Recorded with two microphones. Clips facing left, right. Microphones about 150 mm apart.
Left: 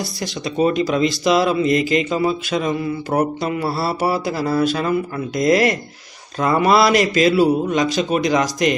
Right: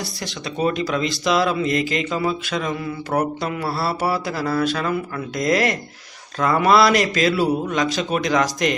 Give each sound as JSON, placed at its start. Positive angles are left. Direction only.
{"t": 0.6, "sound": "mantra", "side_deg": 10}
{"t": 1.0, "sound": "a man's voice", "side_deg": 5}
{"t": 3.2, "sound": "mantra", "side_deg": 10}
{"t": 4.4, "sound": "speech", "side_deg": 30}
{"t": 5.4, "sound": "a man's voice", "side_deg": 5}